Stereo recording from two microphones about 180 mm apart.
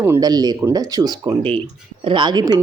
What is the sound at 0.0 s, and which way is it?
Speech, 15° right (ahead or behind).